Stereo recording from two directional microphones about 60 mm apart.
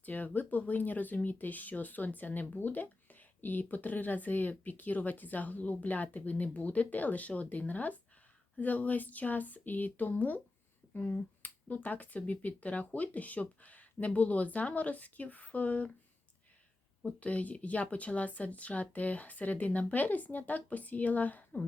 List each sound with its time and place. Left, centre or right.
0.0 s speech: left
17.1 s speech: left